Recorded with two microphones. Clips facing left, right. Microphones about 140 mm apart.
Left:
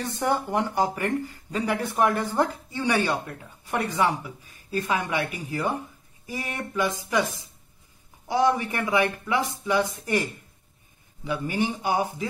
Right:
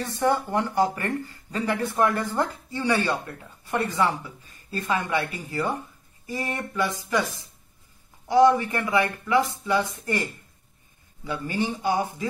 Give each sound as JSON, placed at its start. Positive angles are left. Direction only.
{"t": 0.1, "sound": "speech", "side_deg": 15}
{"t": 11.2, "sound": "speech", "side_deg": 15}